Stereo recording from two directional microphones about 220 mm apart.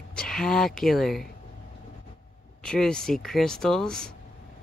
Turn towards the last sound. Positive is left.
turn(degrees=5)  # may be behind; listen again after turning